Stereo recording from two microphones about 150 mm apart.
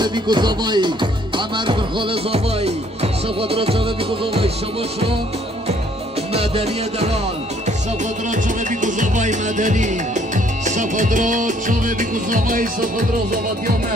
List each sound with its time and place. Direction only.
0.0 s music: 30° right (ahead or behind)
6.3 s music: 45° right (ahead or behind)
8.8 s music: 55° right (ahead or behind)